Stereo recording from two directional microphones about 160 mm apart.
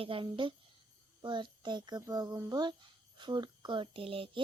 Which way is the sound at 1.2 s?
30° right (ahead or behind).